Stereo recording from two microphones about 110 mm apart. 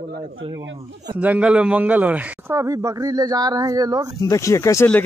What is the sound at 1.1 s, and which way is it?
Speech, 10° right (ahead or behind).